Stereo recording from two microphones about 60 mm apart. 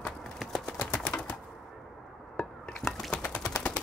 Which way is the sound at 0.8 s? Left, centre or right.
Left.